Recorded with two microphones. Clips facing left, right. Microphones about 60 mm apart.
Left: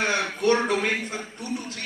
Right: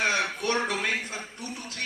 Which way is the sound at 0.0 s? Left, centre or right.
Left.